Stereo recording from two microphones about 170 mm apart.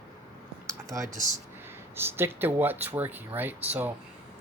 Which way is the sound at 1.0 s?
45° right (ahead or behind).